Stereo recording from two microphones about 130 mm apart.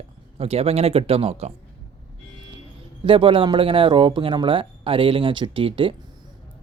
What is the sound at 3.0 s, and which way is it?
Speech, 40° right (ahead or behind).